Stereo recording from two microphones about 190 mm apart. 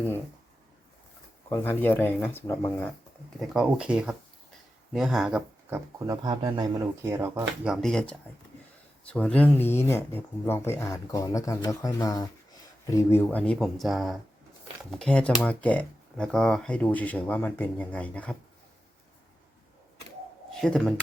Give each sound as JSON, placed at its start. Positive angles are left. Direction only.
{"t": 1.5, "sound": "speech", "side_deg": 15}
{"t": 3.3, "sound": "speech", "side_deg": -5}
{"t": 6.1, "sound": "a man's voice", "side_deg": -25}
{"t": 7.0, "sound": "speech", "side_deg": -15}
{"t": 7.7, "sound": "speech", "side_deg": 5}
{"t": 20.6, "sound": "speech", "side_deg": 5}